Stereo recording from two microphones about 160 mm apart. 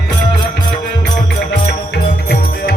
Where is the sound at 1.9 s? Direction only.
90° left.